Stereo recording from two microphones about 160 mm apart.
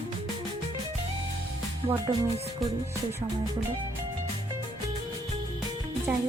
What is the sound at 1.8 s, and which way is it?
Speech, 40° right (ahead or behind).